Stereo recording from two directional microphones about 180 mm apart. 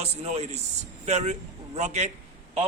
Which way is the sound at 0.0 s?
35° right (ahead or behind).